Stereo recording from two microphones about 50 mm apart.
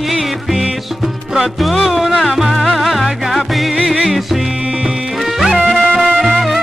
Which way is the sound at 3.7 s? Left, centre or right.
Centre.